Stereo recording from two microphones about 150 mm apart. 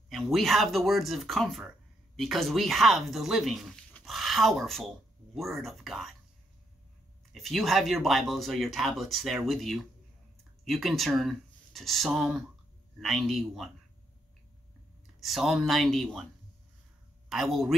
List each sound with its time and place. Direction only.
0.1 s speech: centre (ahead or behind)
7.3 s speech: centre (ahead or behind)
15.1 s speech: centre (ahead or behind)
17.3 s speech: centre (ahead or behind)